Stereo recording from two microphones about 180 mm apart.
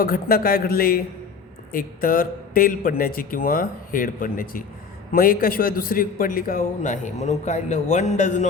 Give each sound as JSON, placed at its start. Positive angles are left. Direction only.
{"t": 0.0, "sound": "a man's voice", "side_deg": 55}